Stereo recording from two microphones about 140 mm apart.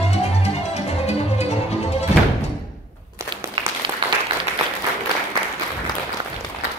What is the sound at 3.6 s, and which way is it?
Applause, 35° right (ahead or behind).